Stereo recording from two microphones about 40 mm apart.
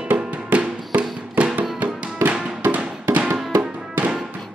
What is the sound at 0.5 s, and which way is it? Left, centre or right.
Music, right.